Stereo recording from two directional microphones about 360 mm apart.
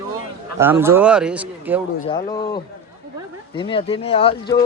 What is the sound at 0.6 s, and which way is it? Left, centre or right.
A man's voice, centre.